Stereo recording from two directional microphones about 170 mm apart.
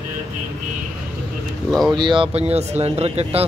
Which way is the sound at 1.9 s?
30° right (ahead or behind).